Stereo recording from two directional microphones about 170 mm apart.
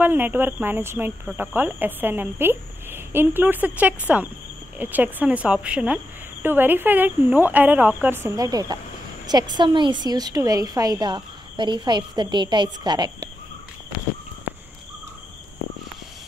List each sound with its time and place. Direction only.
0.0 s a woman's voice: 10° right (ahead or behind)